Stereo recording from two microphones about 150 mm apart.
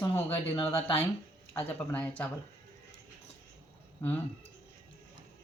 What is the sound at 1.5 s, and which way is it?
Speech, 10° left (ahead or behind).